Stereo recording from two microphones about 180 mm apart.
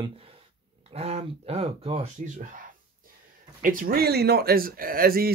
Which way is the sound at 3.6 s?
50° right (ahead or behind).